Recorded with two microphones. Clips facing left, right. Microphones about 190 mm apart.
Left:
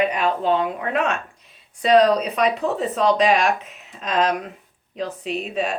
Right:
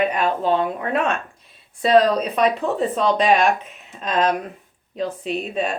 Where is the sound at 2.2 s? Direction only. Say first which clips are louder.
Right 1 dB; 35° right (ahead or behind).